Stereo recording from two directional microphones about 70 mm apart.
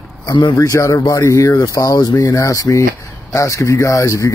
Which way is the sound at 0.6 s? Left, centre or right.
Left.